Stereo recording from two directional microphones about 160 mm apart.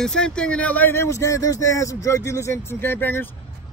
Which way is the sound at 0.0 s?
5° left (ahead or behind).